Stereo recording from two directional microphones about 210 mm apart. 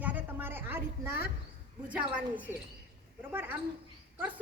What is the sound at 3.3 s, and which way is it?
Speech, 10° right (ahead or behind).